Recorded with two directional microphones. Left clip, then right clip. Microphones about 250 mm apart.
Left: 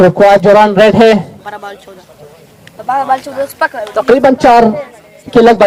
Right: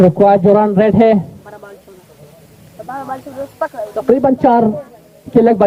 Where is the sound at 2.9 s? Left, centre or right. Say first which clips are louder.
Left 13 dB; left.